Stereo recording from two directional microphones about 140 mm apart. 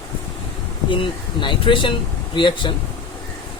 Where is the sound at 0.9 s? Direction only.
35° left (ahead or behind).